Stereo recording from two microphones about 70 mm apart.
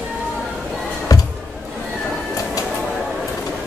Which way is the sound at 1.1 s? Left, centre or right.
Left.